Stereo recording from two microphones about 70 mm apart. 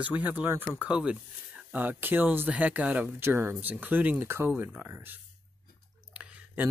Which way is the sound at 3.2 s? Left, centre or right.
Right.